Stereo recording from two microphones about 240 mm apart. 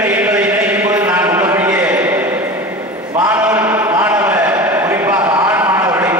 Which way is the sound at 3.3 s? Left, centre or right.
Centre.